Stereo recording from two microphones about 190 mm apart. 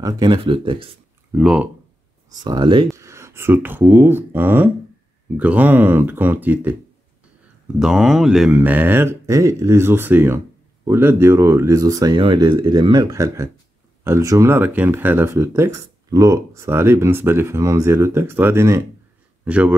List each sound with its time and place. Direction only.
0.0 s speech: 25° right (ahead or behind)
1.3 s speech: 5° right (ahead or behind)
2.4 s speech: 25° right (ahead or behind)
7.8 s speech: centre (ahead or behind)